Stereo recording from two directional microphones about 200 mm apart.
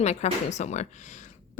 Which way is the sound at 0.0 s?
35° left (ahead or behind).